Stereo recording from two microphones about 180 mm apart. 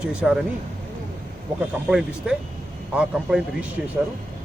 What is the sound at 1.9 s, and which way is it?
Speech, 5° right (ahead or behind).